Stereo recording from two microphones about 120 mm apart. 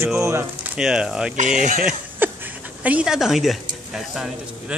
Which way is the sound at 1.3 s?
90° right.